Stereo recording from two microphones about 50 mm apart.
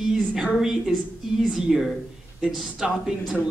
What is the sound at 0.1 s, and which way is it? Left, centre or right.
A woman's voice, centre.